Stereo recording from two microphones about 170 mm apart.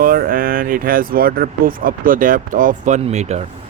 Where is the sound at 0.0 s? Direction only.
55° right (ahead or behind); by 3.4 s 40° right (ahead or behind).